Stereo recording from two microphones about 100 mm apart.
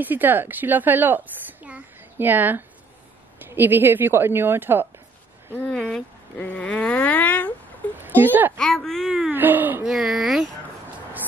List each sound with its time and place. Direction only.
0.0 s a woman's voice: 20° right (ahead or behind)
5.5 s speech: 10° left (ahead or behind)
6.3 s a sound: 15° left (ahead or behind)
8.0 s speech: 20° right (ahead or behind)
8.5 s speech: 5° left (ahead or behind)
9.3 s a woman's voice: 20° right (ahead or behind)
9.8 s speech: 5° right (ahead or behind)